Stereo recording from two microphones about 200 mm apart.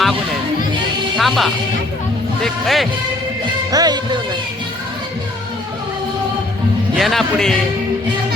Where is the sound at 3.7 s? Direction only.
20° right (ahead or behind).